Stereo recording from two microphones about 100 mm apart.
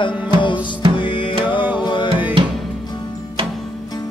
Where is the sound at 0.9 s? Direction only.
60° left (ahead or behind).